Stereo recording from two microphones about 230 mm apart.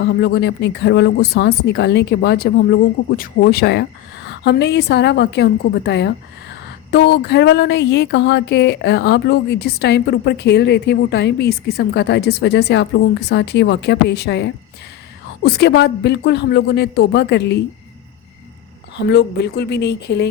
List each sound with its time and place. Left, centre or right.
0.0 s speech: left
19.1 s speech: left